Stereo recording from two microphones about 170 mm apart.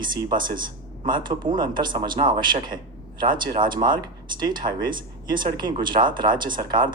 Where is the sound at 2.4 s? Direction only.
25° right (ahead or behind).